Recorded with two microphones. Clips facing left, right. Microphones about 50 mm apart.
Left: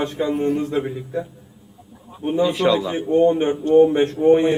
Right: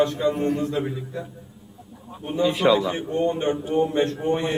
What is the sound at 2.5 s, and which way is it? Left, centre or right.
Speech, centre.